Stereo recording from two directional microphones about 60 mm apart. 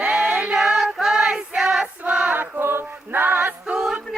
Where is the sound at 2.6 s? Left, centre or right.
Right.